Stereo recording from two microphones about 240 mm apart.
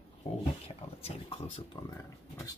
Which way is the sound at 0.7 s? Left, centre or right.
Left.